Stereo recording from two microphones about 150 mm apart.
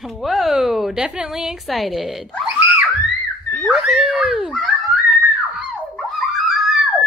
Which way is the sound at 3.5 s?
Centre (ahead or behind).